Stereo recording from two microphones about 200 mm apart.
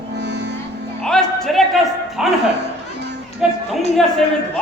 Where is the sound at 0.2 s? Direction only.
60° right (ahead or behind).